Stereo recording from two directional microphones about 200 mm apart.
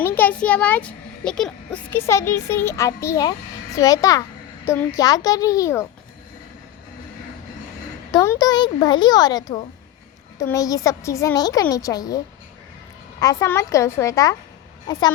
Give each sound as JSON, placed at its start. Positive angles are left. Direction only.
{"t": 0.0, "sound": "a child's voice", "side_deg": 10}
{"t": 8.1, "sound": "a child's voice", "side_deg": 15}